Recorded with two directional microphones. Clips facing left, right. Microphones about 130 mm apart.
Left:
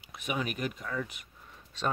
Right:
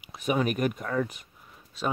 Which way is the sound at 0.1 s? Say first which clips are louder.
Right 8 dB; 40° right (ahead or behind).